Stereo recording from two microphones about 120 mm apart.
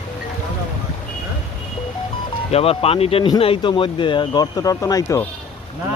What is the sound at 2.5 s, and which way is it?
Speech, 55° left (ahead or behind).